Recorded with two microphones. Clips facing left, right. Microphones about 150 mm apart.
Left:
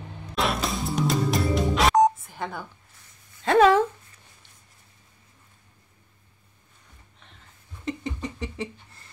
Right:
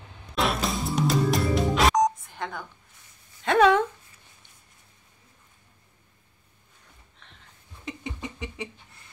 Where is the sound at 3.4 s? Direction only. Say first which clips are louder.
Left 2 dB; centre (ahead or behind).